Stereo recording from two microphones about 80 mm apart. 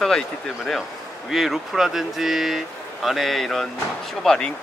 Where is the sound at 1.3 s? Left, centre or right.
Centre.